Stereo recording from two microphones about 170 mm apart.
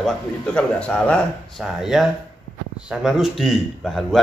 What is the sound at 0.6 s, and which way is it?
Speech, 5° left (ahead or behind).